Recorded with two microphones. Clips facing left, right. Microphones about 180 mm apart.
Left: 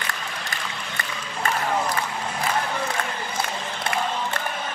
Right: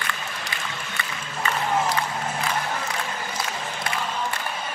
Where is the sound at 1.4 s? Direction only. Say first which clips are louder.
Left 1 dB; 50° left (ahead or behind).